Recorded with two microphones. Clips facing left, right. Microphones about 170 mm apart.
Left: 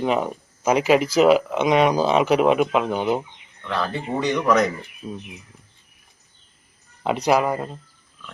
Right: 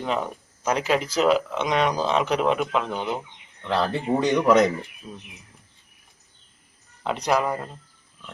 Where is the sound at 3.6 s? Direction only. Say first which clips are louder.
Right 2 dB; 30° right (ahead or behind).